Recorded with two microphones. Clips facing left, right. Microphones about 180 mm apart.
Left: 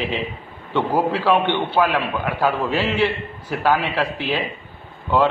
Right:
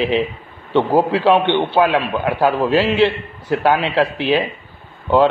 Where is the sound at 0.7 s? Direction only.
15° right (ahead or behind).